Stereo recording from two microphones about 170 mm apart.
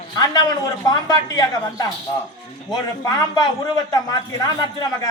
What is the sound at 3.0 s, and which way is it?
Speech, 20° left (ahead or behind).